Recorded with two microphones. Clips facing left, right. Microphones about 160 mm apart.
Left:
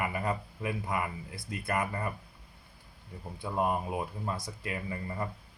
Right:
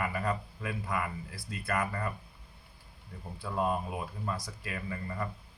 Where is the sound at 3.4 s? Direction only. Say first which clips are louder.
Left 1 dB; 20° left (ahead or behind).